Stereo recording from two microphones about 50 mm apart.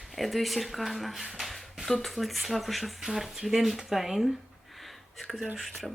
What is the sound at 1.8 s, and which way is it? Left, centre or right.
Speech, centre.